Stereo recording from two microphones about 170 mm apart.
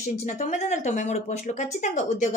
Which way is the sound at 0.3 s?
45° left (ahead or behind).